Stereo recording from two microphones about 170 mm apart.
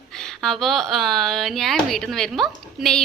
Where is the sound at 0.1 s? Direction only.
5° left (ahead or behind).